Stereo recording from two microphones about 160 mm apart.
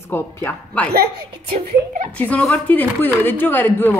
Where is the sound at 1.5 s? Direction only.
45° right (ahead or behind).